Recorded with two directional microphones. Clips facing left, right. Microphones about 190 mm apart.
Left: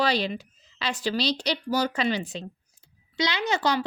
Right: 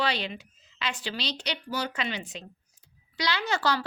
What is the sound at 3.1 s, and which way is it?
Speech, 20° left (ahead or behind).